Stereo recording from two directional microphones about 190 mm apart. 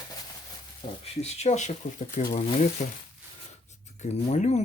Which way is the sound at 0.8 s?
35° left (ahead or behind).